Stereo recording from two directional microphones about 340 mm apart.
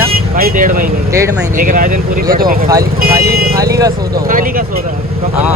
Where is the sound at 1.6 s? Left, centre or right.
Right.